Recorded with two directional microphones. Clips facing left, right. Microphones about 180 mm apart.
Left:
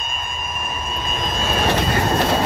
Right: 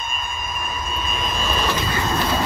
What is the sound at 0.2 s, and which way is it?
Vehicle, 60° left (ahead or behind).